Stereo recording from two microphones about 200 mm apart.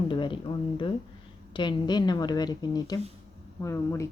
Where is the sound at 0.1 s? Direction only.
25° left (ahead or behind).